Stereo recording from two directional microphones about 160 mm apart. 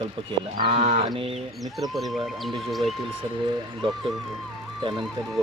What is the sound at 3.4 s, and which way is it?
Speech, 30° right (ahead or behind).